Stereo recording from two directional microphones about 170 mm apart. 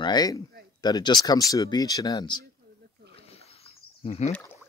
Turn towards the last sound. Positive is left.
turn(degrees=35)  # may be behind; listen again after turning